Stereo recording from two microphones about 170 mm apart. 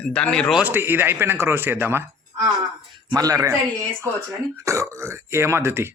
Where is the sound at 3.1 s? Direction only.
20° right (ahead or behind).